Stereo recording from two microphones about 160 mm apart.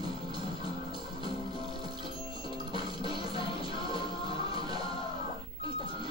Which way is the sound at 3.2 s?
35° left (ahead or behind).